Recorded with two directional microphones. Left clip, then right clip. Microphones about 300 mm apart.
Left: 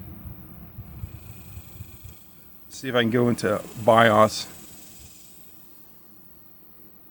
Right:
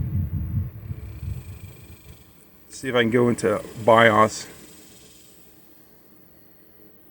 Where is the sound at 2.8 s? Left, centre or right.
Centre.